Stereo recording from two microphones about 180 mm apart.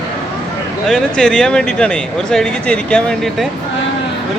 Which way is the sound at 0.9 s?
Centre (ahead or behind).